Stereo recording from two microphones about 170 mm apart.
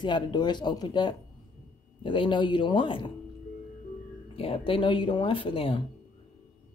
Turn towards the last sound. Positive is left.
turn(degrees=30)  # may be behind; listen again after turning